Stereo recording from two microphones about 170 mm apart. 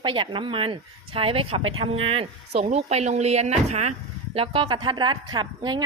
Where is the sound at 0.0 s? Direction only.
30° right (ahead or behind).